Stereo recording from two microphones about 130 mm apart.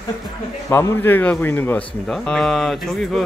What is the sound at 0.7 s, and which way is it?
A man's voice, 20° left (ahead or behind).